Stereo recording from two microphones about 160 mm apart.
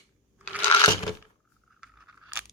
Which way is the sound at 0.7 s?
30° left (ahead or behind).